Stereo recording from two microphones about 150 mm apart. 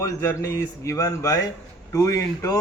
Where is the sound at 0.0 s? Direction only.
20° left (ahead or behind).